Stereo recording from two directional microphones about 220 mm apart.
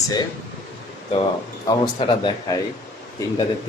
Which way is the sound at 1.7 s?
20° left (ahead or behind).